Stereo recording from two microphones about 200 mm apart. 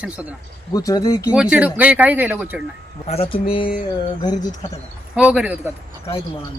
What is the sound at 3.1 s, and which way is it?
Speech, 30° left (ahead or behind).